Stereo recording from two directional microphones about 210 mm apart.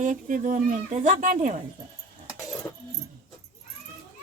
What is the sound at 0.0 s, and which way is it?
Speech, 40° right (ahead or behind).